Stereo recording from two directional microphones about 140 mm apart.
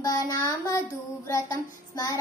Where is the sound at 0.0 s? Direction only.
25° left (ahead or behind).